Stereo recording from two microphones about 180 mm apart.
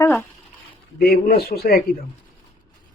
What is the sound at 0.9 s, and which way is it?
Speech, 60° left (ahead or behind).